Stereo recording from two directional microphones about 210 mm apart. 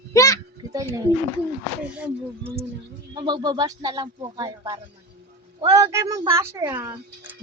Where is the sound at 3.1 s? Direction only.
20° right (ahead or behind).